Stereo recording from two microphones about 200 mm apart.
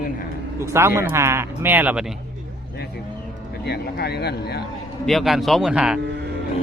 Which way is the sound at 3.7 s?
55° left (ahead or behind).